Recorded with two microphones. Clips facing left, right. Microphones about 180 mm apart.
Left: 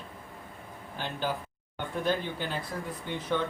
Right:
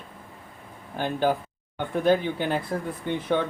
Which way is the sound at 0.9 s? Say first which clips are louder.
Right 9 dB; 50° right (ahead or behind).